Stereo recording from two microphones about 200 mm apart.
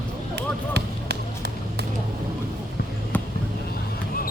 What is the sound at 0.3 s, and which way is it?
Basketball bounce, 55° right (ahead or behind).